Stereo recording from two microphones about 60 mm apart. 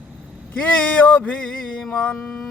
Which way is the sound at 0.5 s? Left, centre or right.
Left.